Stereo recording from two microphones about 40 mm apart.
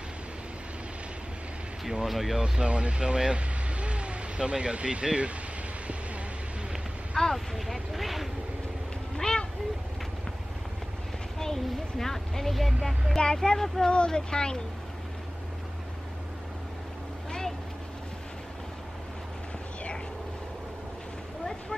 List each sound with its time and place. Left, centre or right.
1.9 s speech: centre
2.3 s speech: centre
7.3 s speech: centre
9.1 s a sound: centre
11.3 s speech: centre
13.8 s speech: left